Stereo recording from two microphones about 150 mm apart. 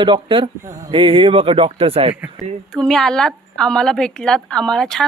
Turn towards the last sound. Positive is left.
turn(degrees=5)  # may be behind; listen again after turning